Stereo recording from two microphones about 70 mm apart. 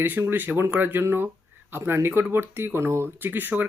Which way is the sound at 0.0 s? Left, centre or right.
Right.